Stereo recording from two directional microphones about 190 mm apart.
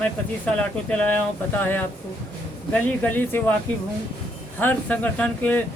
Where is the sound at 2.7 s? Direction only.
10° left (ahead or behind).